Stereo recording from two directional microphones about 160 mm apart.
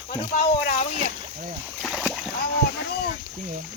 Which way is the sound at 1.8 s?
Centre (ahead or behind).